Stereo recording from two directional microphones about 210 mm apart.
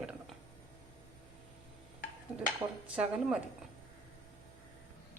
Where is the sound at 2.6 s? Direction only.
10° right (ahead or behind).